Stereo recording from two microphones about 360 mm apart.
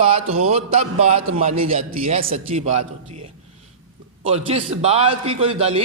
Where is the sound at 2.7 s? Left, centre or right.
Right.